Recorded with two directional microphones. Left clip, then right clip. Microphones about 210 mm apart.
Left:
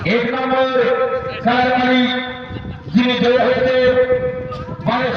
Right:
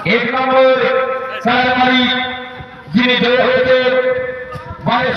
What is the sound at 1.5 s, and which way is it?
Mantra, 50° left (ahead or behind).